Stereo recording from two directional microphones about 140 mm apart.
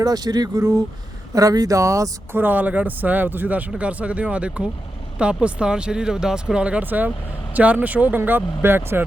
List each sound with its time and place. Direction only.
0.0 s speech: 25° right (ahead or behind)